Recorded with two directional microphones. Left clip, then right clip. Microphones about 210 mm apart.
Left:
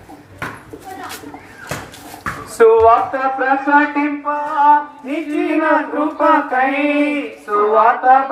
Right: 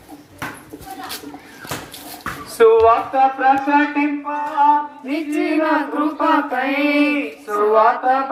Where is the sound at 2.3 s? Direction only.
50° right (ahead or behind).